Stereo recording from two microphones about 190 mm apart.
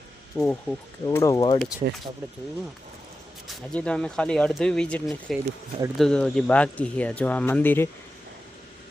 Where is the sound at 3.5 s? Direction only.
5° left (ahead or behind).